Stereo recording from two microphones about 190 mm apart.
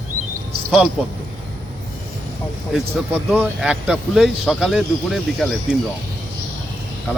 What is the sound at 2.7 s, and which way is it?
Speech, 5° right (ahead or behind).